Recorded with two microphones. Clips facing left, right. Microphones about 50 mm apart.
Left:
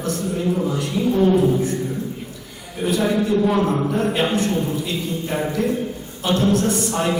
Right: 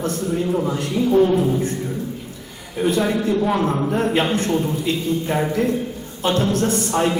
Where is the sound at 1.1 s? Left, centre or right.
Centre.